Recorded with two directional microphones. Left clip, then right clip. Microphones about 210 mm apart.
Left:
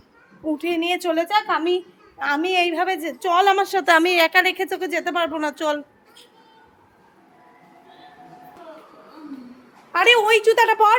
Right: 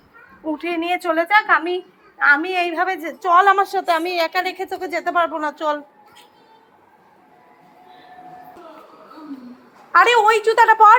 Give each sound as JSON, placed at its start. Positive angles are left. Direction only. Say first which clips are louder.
{"t": 0.6, "sound": "a woman's voice", "louder": "right 1 dB", "side_deg": 25}
{"t": 4.9, "sound": "a woman's voice", "louder": "right 6 dB", "side_deg": 25}
{"t": 9.9, "sound": "a woman's voice", "louder": "right 2 dB", "side_deg": 10}